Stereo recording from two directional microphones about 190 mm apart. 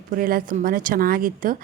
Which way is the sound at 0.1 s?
50° right (ahead or behind).